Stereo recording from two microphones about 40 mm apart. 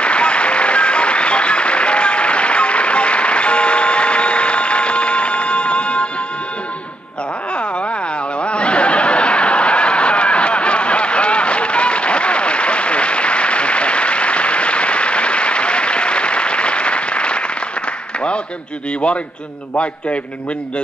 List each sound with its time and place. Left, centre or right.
0.0 s applause: left
8.4 s snicker: left